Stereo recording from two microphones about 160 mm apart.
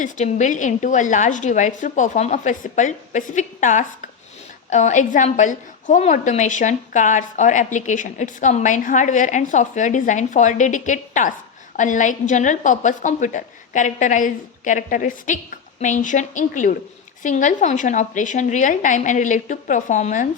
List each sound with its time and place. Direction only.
0.0 s a woman's voice: 50° left (ahead or behind)